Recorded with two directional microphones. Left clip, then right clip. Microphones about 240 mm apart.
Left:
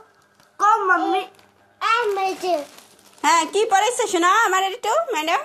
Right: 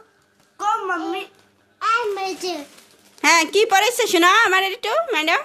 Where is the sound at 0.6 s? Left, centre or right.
Right.